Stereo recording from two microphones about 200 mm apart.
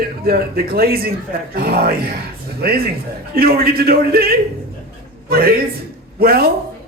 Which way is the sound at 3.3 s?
50° right (ahead or behind).